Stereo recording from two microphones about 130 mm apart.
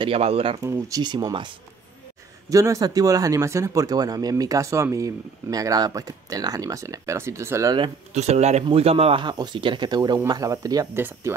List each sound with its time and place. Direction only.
0.0 s speech: 50° right (ahead or behind)
0.6 s speech: 25° right (ahead or behind)
2.5 s speech: 25° right (ahead or behind)
8.1 s speech: 60° right (ahead or behind)
8.6 s speech: 50° right (ahead or behind); by 11.3 s 15° right (ahead or behind)